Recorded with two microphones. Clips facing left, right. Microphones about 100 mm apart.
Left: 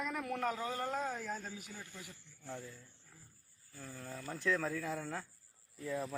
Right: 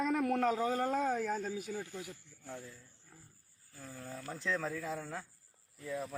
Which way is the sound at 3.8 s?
10° right (ahead or behind).